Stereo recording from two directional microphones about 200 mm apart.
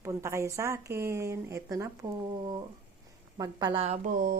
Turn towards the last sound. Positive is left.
turn(degrees=-45)  # may be behind; listen again after turning